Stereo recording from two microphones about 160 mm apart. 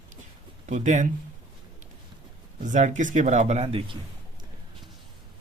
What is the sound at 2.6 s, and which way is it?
Speech, 50° right (ahead or behind).